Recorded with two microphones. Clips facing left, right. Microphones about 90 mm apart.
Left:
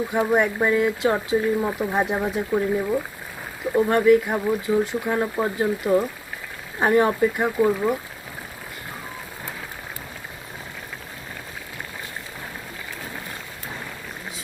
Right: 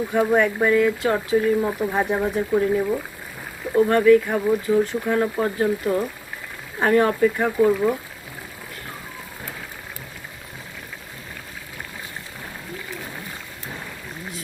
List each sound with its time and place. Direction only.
0.1 s speech: 15° left (ahead or behind)